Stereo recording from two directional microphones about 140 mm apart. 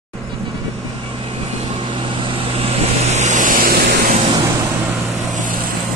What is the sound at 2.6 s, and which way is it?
Vehicle, 55° right (ahead or behind).